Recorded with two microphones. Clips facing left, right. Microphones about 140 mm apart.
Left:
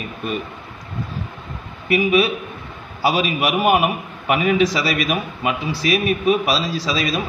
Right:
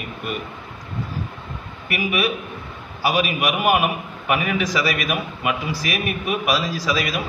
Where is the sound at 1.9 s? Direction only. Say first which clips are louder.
Left 6 dB; 25° left (ahead or behind).